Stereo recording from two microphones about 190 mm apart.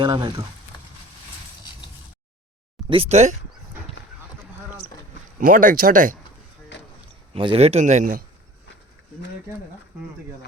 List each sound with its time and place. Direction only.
0.0 s speech: 25° right (ahead or behind)
2.9 s speech: 35° right (ahead or behind)
5.4 s speech: 45° right (ahead or behind)
7.3 s speech: 30° right (ahead or behind)